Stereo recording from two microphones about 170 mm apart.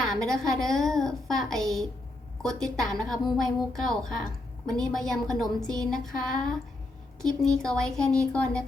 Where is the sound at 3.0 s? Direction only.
Centre (ahead or behind).